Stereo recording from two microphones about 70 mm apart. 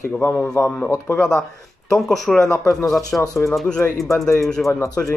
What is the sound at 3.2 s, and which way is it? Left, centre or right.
Speech, left.